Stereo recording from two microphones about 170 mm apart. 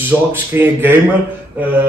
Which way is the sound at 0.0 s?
10° right (ahead or behind).